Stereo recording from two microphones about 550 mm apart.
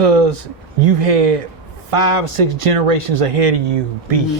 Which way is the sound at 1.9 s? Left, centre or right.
Right.